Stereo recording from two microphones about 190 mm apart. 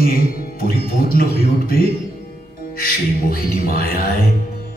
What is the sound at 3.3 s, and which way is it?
Music, 50° left (ahead or behind).